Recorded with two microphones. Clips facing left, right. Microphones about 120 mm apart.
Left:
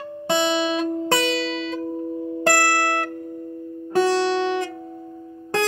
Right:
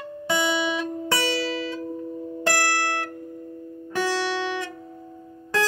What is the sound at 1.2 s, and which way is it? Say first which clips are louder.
Music: left 2 dB; 25° left (ahead or behind).